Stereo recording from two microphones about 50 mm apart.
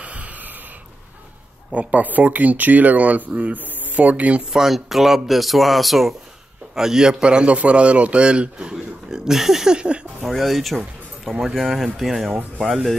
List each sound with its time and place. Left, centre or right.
0.0 s wheeze: right
1.7 s speech: right
4.5 s a man's voice: centre
9.3 s speech: centre
9.8 s a man's voice: centre
10.2 s speech: centre